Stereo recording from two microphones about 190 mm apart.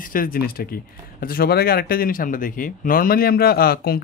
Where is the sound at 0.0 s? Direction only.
50° left (ahead or behind).